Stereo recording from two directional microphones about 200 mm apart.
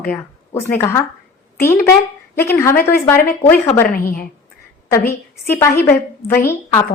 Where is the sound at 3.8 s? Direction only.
50° left (ahead or behind).